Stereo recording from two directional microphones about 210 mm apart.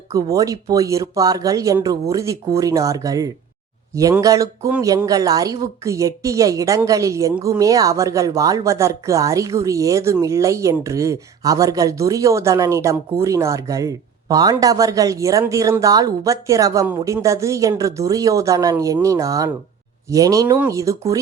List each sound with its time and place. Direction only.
0.1 s speech: 15° right (ahead or behind)